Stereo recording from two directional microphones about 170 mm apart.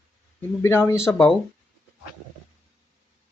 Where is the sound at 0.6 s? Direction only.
15° left (ahead or behind).